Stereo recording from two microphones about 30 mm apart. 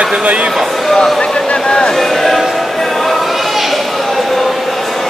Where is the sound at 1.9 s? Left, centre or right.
Centre.